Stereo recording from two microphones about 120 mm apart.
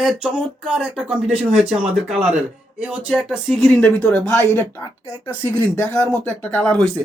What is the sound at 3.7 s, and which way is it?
Speech, 10° left (ahead or behind).